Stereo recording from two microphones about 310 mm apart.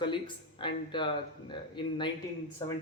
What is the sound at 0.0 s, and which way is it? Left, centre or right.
A man's voice, centre.